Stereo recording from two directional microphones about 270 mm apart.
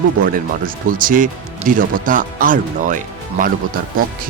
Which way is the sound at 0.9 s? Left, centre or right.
Right.